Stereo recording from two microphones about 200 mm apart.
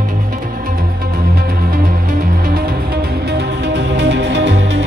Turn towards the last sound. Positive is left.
turn(degrees=-60)  # may be behind; listen again after turning